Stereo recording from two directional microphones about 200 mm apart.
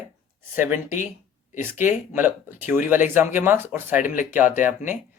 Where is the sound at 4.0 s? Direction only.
40° left (ahead or behind).